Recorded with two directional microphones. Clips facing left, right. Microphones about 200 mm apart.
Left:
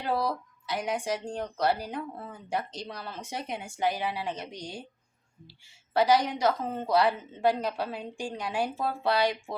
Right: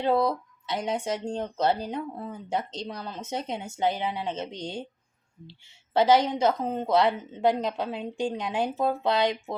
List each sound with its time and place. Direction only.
0.0 s speech: 25° right (ahead or behind)